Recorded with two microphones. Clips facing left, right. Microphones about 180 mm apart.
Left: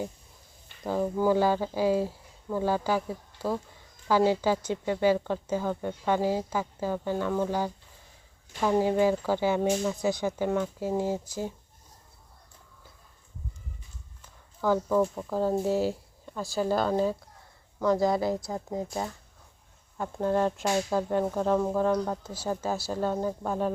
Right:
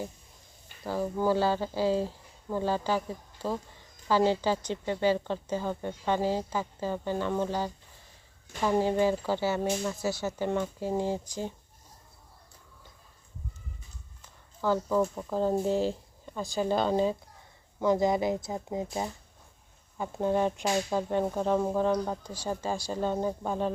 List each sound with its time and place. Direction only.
0.9 s speech: 15° left (ahead or behind)
14.8 s speech: centre (ahead or behind)
17.7 s speech: 20° right (ahead or behind); by 23.7 s 5° left (ahead or behind)